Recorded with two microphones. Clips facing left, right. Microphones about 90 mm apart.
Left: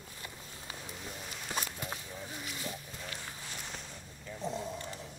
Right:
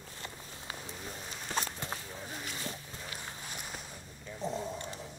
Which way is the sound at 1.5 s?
30° right (ahead or behind).